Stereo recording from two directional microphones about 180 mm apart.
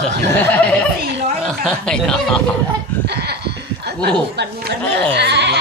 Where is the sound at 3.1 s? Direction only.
65° right (ahead or behind).